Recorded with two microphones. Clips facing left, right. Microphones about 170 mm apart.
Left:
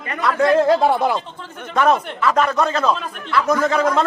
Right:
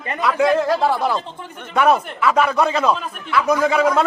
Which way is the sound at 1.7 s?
5° right (ahead or behind).